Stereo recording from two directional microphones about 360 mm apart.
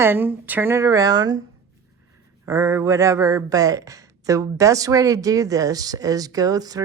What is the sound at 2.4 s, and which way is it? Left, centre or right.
Speech, centre.